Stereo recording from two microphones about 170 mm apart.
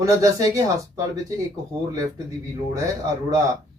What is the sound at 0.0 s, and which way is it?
Speech, 20° right (ahead or behind).